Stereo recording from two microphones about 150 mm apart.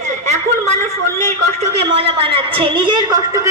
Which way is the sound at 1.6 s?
40° right (ahead or behind).